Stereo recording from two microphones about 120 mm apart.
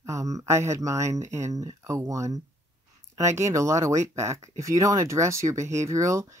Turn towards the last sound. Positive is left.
turn(degrees=-25)  # may be behind; listen again after turning